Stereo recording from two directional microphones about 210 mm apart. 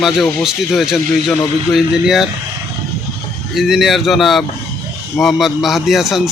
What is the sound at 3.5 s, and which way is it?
Speech, centre (ahead or behind).